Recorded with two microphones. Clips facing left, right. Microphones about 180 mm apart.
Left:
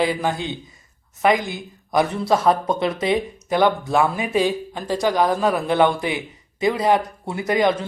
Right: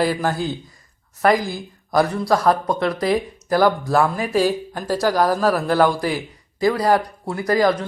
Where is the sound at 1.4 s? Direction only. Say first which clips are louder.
Right 2 dB; 35° right (ahead or behind).